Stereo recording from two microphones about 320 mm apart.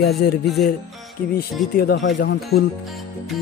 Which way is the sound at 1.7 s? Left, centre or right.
Left.